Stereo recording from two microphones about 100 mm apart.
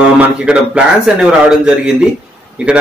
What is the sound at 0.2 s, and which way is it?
A man's voice, 10° right (ahead or behind).